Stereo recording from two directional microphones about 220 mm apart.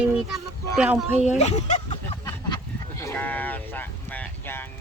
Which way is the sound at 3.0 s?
10° left (ahead or behind).